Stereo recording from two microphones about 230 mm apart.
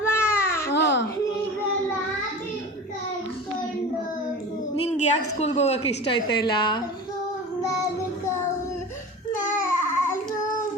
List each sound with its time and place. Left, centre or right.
0.1 s baby cry: centre
0.7 s babbling: left
4.9 s a woman's voice: left
7.6 s child singing: centre
9.5 s babbling: centre